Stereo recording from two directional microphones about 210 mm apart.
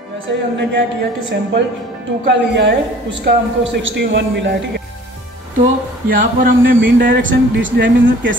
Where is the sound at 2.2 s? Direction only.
55° right (ahead or behind).